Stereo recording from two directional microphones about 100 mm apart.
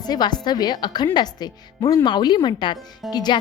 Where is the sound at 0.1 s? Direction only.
45° left (ahead or behind).